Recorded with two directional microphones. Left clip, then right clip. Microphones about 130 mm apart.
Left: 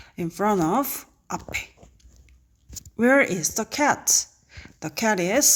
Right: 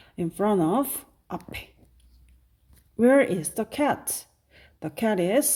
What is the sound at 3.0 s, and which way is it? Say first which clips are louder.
Speech: left 1 dB; 20° right (ahead or behind).